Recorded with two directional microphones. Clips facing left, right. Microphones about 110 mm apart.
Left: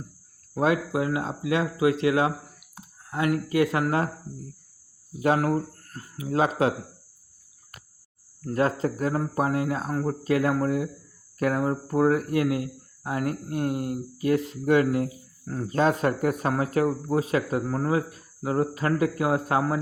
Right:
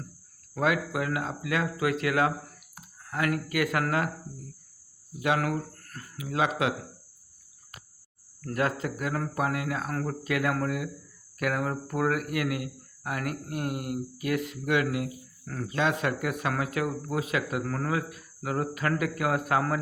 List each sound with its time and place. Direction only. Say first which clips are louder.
0.5 s speech: left 3 dB; 30° left (ahead or behind)
5.2 s speech: left 4 dB; 35° left (ahead or behind)
8.4 s speech: left 4 dB; 30° left (ahead or behind)
9.9 s speech: left 4 dB; 20° left (ahead or behind)
10.2 s speech: left 5 dB; 30° left (ahead or behind)